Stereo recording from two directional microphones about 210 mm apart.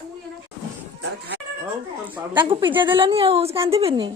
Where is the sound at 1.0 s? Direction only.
55° right (ahead or behind).